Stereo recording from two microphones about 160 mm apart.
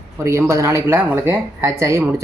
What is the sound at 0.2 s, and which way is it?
A woman's voice, 15° right (ahead or behind).